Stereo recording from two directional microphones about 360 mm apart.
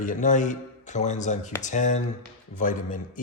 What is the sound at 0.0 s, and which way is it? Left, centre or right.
Speech, left.